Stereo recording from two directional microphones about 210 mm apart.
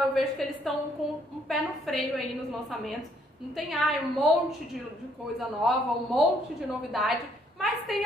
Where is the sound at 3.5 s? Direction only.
Centre (ahead or behind).